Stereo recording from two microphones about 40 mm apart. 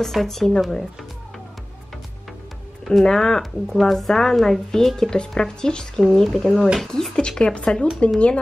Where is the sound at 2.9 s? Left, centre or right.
Centre.